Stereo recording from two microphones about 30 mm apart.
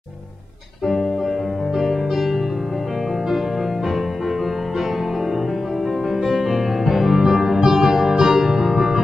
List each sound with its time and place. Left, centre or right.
1.8 s music: centre
6.2 s music: centre
6.5 s music: centre